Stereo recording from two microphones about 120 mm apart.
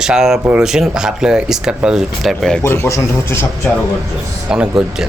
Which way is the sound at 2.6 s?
20° left (ahead or behind).